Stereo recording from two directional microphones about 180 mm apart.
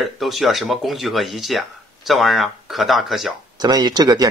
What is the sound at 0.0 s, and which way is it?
Speech, centre (ahead or behind).